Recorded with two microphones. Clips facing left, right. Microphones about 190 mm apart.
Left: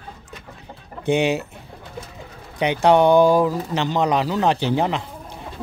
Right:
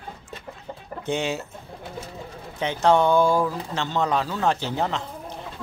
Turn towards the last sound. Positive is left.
turn(degrees=15)  # may be behind; listen again after turning